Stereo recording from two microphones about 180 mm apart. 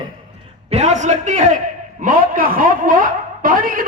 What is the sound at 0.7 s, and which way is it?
A man's voice, 40° right (ahead or behind).